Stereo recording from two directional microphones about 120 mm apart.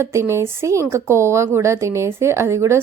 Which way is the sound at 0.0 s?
25° right (ahead or behind).